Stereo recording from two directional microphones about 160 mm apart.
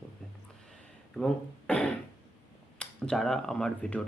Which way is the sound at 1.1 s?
5° left (ahead or behind).